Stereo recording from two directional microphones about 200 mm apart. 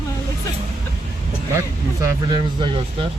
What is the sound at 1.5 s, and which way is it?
Speech, 15° right (ahead or behind).